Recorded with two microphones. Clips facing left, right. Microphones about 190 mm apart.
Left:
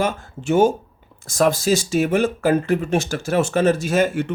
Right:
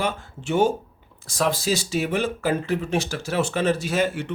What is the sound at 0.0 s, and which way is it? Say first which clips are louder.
Speech: left 4 dB; 45° left (ahead or behind).